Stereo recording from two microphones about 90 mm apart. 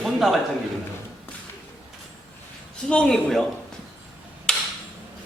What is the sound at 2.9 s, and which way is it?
Speech, 10° left (ahead or behind).